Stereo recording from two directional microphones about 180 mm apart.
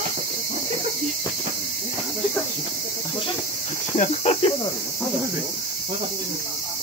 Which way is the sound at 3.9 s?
35° left (ahead or behind).